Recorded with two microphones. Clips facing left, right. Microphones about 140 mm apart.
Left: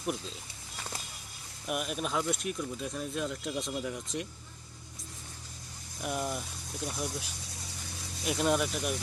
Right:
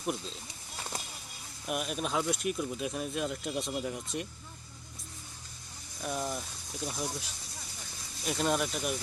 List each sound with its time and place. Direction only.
1.6 s speech: centre (ahead or behind)
6.0 s speech: 10° left (ahead or behind)